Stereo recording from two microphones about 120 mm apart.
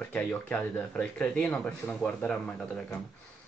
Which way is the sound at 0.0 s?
15° left (ahead or behind).